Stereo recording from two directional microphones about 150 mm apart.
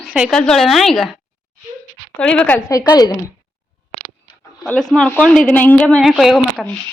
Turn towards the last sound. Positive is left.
turn(degrees=0)  # may be behind; listen again after turning